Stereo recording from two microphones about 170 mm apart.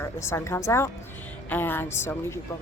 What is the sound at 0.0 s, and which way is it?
A woman's voice, 15° left (ahead or behind).